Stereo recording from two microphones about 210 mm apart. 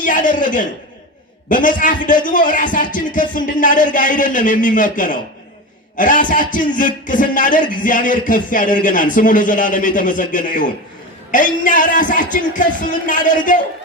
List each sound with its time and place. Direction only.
0.0 s speech: 40° left (ahead or behind)